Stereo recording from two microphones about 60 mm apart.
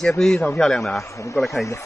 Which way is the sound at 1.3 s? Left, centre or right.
Centre.